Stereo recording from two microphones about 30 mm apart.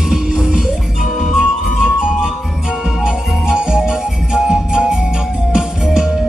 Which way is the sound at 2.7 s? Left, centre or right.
Right.